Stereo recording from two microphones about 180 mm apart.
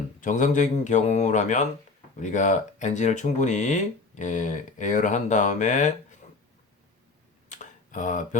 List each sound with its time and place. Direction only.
0.2 s speech: 45° left (ahead or behind)
7.5 s tick: 45° left (ahead or behind)